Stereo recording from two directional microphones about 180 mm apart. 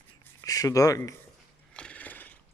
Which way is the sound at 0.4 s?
20° left (ahead or behind).